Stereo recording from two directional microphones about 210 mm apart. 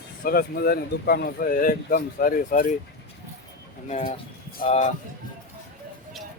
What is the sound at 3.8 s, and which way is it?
Speech, 35° left (ahead or behind).